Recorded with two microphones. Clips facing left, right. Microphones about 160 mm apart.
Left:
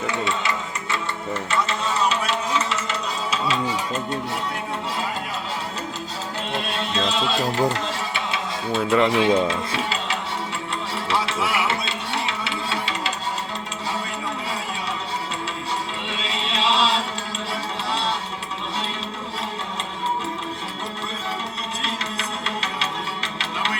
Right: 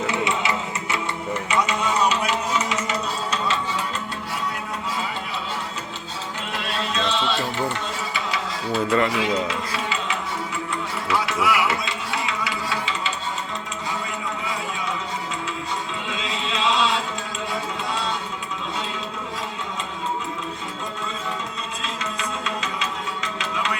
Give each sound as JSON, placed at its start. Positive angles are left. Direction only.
{"t": 0.1, "sound": "a sound", "side_deg": -20}
{"t": 3.2, "sound": "music", "side_deg": 5}
{"t": 6.5, "sound": "music", "side_deg": 30}
{"t": 8.1, "sound": "a sound", "side_deg": 25}
{"t": 8.9, "sound": "speech", "side_deg": 20}
{"t": 11.1, "sound": "music", "side_deg": 30}
{"t": 16.0, "sound": "chant", "side_deg": 30}
{"t": 22.2, "sound": "music", "side_deg": 30}